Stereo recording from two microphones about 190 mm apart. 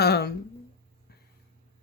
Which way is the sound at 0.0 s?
60° left (ahead or behind).